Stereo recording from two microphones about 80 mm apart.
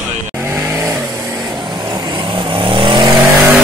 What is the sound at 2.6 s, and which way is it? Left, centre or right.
Vehicle, right.